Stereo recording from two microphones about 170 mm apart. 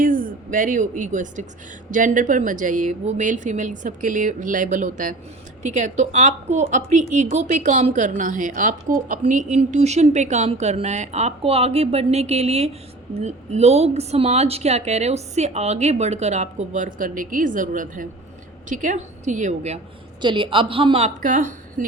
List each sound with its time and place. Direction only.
0.0 s a woman's voice: 55° right (ahead or behind)
20.2 s speech: 30° right (ahead or behind)
21.2 s speech: 50° right (ahead or behind)